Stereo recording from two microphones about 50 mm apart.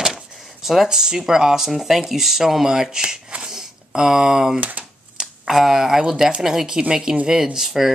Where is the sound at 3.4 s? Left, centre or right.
Centre.